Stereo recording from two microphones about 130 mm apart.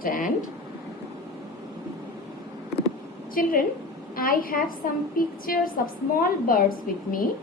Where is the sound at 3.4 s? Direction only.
90° left.